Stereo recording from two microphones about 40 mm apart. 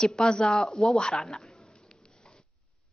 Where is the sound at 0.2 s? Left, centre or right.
Centre.